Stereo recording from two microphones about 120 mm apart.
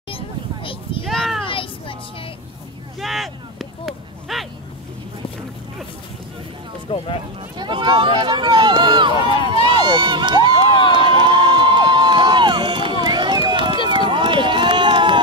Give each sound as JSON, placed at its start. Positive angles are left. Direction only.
{"t": 1.0, "sound": "a sound", "side_deg": 0}
{"t": 1.5, "sound": "children playing", "side_deg": 45}
{"t": 3.0, "sound": "a sound", "side_deg": 0}
{"t": 6.9, "sound": "speech", "side_deg": 45}
{"t": 7.5, "sound": "speech", "side_deg": -40}
{"t": 9.5, "sound": "crowd", "side_deg": -40}
{"t": 13.8, "sound": "run", "side_deg": -40}